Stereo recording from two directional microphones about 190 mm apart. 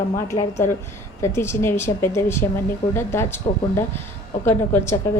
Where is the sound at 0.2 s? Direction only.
15° left (ahead or behind).